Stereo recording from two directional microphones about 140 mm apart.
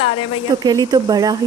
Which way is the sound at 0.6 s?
30° right (ahead or behind).